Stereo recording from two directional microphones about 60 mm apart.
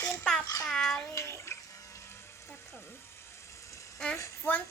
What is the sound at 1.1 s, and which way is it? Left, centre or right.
Bathtub, left.